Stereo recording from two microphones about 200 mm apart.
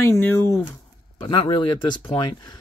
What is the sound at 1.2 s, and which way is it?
Speech, 25° left (ahead or behind).